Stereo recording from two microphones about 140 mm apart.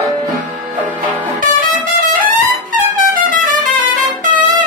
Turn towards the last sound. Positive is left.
turn(degrees=-75)  # may be behind; listen again after turning